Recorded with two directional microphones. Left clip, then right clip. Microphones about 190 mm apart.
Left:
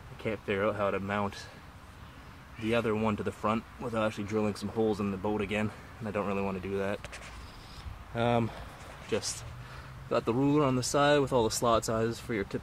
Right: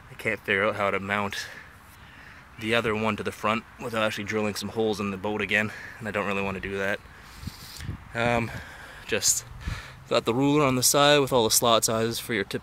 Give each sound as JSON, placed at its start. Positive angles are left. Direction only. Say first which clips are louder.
{"t": 0.2, "sound": "speech", "louder": "right 6 dB", "side_deg": -15}
{"t": 2.7, "sound": "speech", "louder": "right 5 dB", "side_deg": -15}
{"t": 8.1, "sound": "speech", "louder": "right 4 dB", "side_deg": -5}
{"t": 10.0, "sound": "speech", "louder": "right 5 dB", "side_deg": -25}